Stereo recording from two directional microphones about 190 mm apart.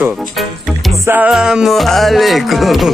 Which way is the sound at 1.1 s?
5° right (ahead or behind).